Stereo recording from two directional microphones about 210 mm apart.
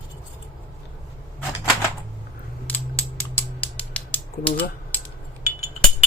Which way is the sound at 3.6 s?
5° left (ahead or behind).